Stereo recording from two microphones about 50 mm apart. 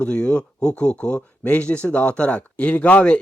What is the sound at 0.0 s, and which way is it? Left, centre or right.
Speech, left.